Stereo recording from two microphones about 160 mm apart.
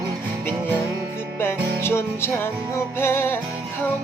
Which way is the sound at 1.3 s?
15° left (ahead or behind).